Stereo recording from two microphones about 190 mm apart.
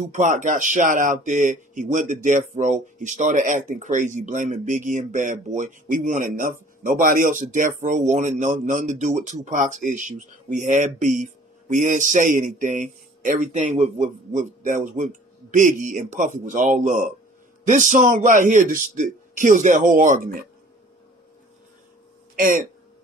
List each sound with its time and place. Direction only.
0.1 s speech: 40° right (ahead or behind)
22.3 s speech: 45° right (ahead or behind)